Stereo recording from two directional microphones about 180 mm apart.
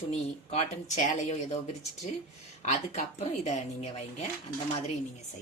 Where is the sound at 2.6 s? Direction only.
40° left (ahead or behind).